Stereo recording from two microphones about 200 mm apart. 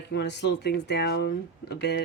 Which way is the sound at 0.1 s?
60° left (ahead or behind).